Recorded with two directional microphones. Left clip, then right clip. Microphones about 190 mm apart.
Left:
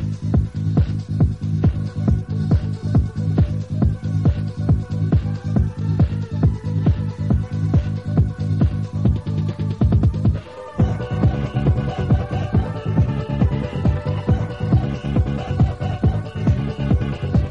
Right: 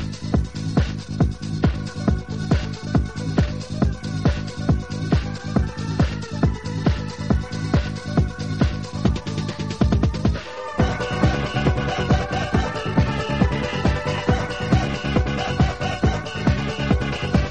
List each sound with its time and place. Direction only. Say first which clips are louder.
0.3 s music: even; 30° right (ahead or behind)